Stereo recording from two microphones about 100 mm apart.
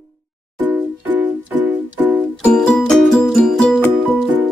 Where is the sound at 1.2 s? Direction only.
15° right (ahead or behind).